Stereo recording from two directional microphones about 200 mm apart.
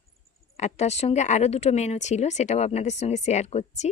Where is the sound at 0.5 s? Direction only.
35° left (ahead or behind).